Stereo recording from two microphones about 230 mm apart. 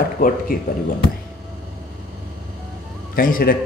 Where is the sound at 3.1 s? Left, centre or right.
Left.